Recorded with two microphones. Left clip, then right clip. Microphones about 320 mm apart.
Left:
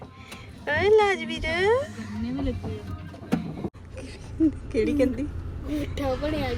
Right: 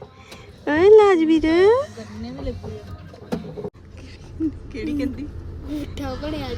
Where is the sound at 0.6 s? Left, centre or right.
Right.